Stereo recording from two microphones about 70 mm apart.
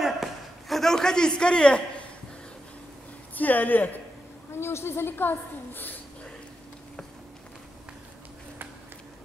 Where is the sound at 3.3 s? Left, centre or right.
Left.